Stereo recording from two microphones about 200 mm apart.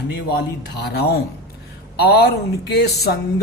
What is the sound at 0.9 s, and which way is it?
Speech, 55° left (ahead or behind).